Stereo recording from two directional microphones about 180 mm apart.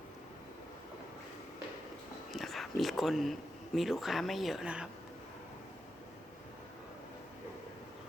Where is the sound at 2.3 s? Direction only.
Centre (ahead or behind).